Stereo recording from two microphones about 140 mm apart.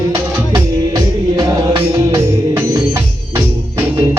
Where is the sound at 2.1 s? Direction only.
20° right (ahead or behind).